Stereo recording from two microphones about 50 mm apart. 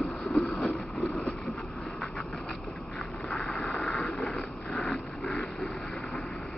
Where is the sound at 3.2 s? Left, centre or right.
Centre.